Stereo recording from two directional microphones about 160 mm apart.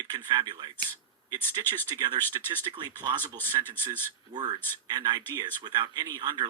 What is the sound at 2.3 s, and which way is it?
Speech, 25° right (ahead or behind).